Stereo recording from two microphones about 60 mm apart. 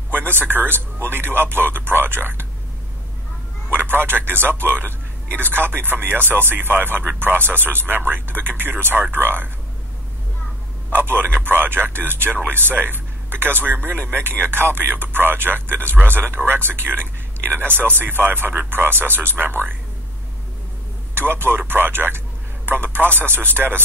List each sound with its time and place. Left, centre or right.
0.1 s a man's voice: right
3.7 s a man's voice: right
10.9 s a man's voice: right
21.1 s a man's voice: right